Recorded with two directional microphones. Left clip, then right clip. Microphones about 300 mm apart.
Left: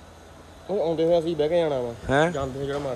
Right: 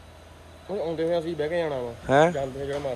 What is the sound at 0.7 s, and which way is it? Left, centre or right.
A man's voice, centre.